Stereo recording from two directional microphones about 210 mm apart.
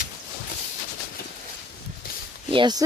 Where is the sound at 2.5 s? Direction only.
20° right (ahead or behind).